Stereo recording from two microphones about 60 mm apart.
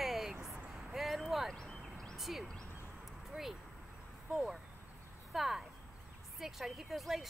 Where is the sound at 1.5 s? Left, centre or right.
Centre.